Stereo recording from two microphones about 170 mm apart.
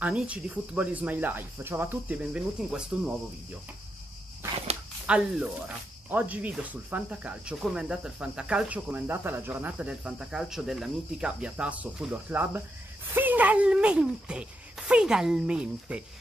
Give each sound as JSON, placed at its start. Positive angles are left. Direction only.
{"t": 0.0, "sound": "speech", "side_deg": -5}
{"t": 5.0, "sound": "speech", "side_deg": -5}